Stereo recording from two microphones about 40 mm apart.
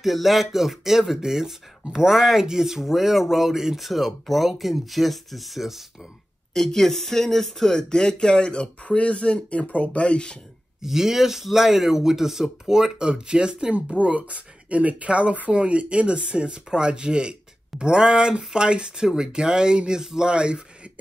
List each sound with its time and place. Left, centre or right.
0.0 s speech: centre
6.5 s speech: centre
7.7 s speech: centre
10.8 s speech: centre
14.0 s speech: right